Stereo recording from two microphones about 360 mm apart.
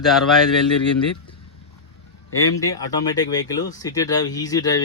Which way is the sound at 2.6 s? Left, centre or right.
Centre.